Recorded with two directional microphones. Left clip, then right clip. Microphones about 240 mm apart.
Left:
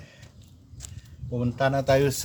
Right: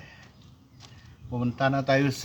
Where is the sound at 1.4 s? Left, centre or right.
Centre.